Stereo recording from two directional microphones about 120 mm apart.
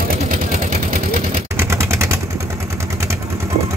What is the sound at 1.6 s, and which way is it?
Vehicle, 25° right (ahead or behind).